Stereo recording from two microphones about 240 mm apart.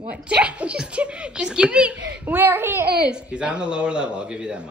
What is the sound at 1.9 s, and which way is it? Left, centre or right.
Speech, right.